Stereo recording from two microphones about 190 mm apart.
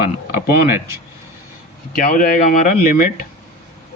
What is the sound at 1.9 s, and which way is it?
Speech, 50° left (ahead or behind).